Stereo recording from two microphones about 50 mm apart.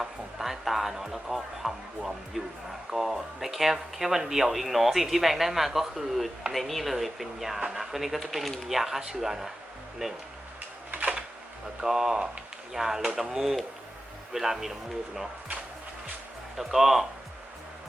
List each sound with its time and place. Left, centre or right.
0.0 s speech: centre
10.9 s a sound: right
11.8 s speech: centre
16.6 s speech: centre